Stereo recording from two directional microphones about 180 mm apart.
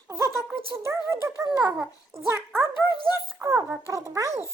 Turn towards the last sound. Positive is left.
turn(degrees=-15)  # may be behind; listen again after turning